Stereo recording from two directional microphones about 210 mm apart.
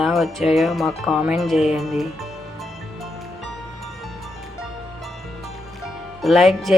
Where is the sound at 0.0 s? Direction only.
Centre (ahead or behind).